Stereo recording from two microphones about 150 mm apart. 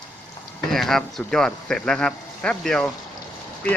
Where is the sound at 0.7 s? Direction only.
Centre (ahead or behind).